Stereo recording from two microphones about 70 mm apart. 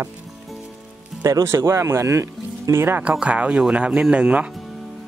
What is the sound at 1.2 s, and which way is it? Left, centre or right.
Speech, right.